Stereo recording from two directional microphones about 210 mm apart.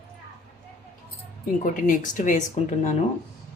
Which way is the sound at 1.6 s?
40° left (ahead or behind).